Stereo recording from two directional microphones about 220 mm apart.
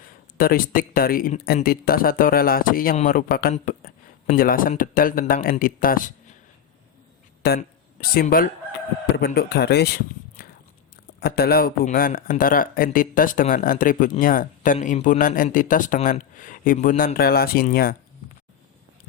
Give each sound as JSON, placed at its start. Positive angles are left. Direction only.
{"t": 0.3, "sound": "speech", "side_deg": 40}
{"t": 7.4, "sound": "a man's voice", "side_deg": 45}